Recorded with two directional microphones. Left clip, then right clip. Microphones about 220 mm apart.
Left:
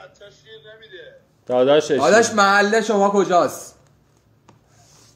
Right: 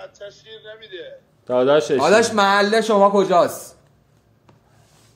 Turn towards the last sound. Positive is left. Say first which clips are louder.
# right 1 dB
turn(degrees=-15)  # may be behind; listen again after turning